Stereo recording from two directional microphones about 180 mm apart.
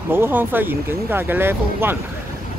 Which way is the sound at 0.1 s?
10° right (ahead or behind).